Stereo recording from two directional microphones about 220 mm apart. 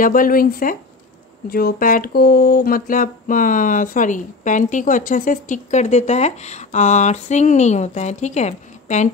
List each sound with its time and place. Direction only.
0.0 s speech: 40° left (ahead or behind)